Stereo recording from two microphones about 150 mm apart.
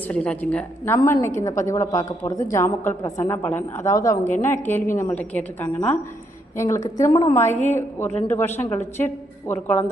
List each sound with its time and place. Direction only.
0.1 s a woman's voice: 10° left (ahead or behind)
6.8 s a woman's voice: 25° left (ahead or behind)